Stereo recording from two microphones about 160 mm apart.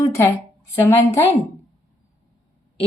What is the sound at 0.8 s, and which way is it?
Speech, 15° left (ahead or behind).